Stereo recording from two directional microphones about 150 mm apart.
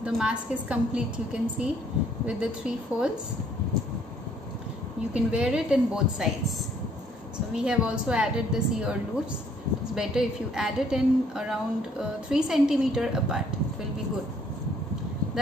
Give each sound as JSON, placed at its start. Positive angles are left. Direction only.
{"t": 0.0, "sound": "a woman's voice", "side_deg": -5}
{"t": 5.1, "sound": "a woman's voice", "side_deg": -5}
{"t": 7.5, "sound": "a woman's voice", "side_deg": -5}